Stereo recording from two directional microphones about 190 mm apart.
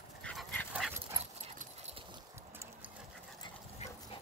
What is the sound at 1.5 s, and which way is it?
Clip-clop, 35° right (ahead or behind).